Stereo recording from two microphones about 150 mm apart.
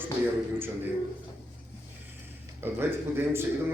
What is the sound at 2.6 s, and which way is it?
Speech, 15° right (ahead or behind).